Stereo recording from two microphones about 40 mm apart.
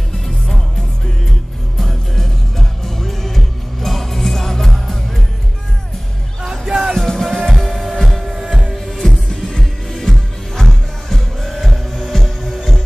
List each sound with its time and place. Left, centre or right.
1.8 s music: centre
6.4 s music: centre
7.0 s music: centre